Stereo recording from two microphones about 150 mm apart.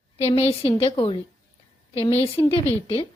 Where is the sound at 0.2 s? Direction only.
40° left (ahead or behind).